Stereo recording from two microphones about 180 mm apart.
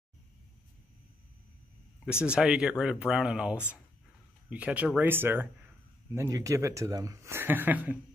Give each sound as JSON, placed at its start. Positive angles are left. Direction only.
{"t": 2.2, "sound": "speech", "side_deg": -5}